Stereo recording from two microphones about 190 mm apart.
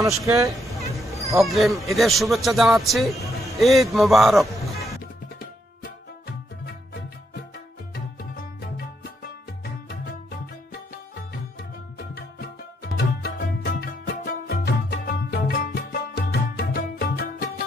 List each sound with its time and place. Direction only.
0.2 s speech: 15° right (ahead or behind)
1.4 s a man's voice: centre (ahead or behind)
7.9 s music: 55° left (ahead or behind)
12.1 s music: 55° left (ahead or behind)